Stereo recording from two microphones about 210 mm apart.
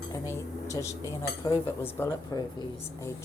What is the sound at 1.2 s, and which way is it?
Speech, 15° left (ahead or behind).